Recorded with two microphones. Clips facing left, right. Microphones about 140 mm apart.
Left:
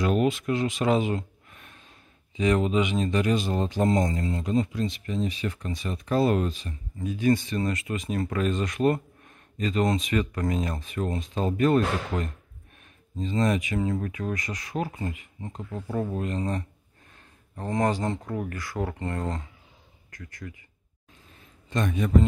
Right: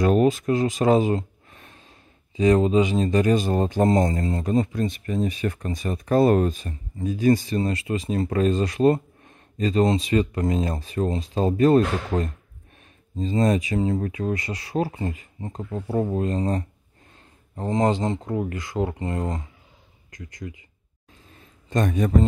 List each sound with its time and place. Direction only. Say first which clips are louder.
0.0 s speech: right 5 dB; 40° right (ahead or behind)
17.6 s speech: right 4 dB; 25° right (ahead or behind)
21.6 s speech: right 4 dB; 45° right (ahead or behind)